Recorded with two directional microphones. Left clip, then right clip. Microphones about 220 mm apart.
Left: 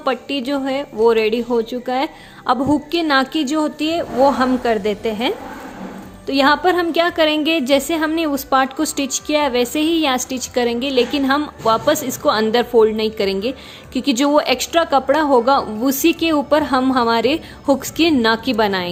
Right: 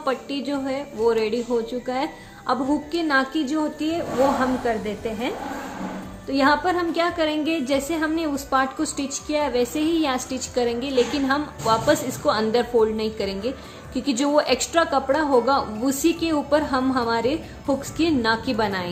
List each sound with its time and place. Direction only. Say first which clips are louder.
0.0 s a woman's voice: left 5 dB; 35° left (ahead or behind)